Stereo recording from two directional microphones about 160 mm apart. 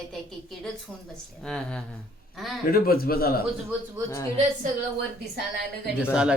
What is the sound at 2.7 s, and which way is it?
Speech, 70° left (ahead or behind).